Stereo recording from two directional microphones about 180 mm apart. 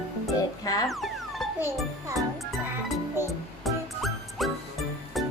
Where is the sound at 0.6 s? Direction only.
20° left (ahead or behind).